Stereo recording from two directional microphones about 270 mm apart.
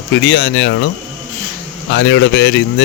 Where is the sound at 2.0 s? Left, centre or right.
Left.